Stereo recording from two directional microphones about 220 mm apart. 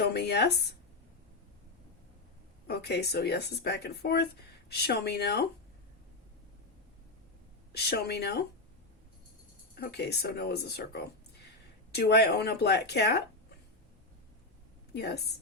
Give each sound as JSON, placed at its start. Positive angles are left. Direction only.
{"t": 0.0, "sound": "speech", "side_deg": 50}
{"t": 2.6, "sound": "speech", "side_deg": 50}
{"t": 7.7, "sound": "speech", "side_deg": 45}
{"t": 9.7, "sound": "speech", "side_deg": 45}
{"t": 14.9, "sound": "speech", "side_deg": 50}